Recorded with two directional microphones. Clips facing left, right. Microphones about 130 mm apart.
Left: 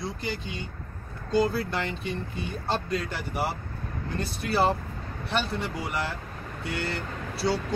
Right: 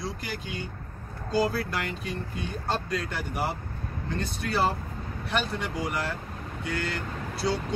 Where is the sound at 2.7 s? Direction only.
Centre (ahead or behind).